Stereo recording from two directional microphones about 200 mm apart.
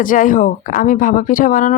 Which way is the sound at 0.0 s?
40° left (ahead or behind).